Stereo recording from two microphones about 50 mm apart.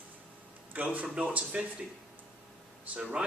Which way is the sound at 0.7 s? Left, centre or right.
Right.